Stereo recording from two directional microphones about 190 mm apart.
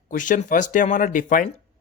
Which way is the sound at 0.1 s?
45° left (ahead or behind).